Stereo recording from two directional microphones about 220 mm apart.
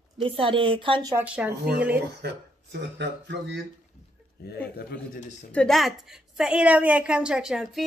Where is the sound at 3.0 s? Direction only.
50° right (ahead or behind).